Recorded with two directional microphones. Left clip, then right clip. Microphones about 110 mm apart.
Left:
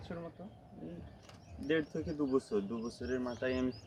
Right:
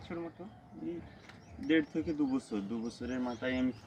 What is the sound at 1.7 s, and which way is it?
Speech, 45° left (ahead or behind).